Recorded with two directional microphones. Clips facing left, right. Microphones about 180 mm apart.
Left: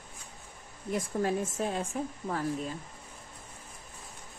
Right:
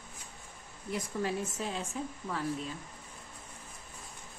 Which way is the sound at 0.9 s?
50° left (ahead or behind).